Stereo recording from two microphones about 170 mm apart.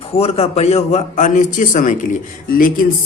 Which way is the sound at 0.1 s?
35° left (ahead or behind).